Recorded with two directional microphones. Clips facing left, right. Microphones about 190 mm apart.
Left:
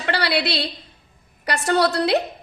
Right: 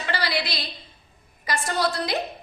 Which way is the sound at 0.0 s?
65° left (ahead or behind).